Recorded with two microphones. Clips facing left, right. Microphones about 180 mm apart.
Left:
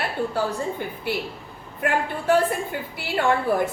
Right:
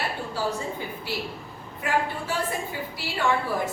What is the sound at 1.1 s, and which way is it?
A woman's voice, 60° left (ahead or behind).